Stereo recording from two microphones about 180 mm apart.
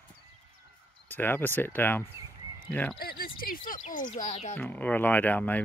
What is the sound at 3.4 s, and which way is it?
Speech, 50° left (ahead or behind).